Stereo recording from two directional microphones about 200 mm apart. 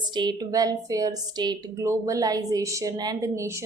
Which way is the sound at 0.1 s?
20° right (ahead or behind).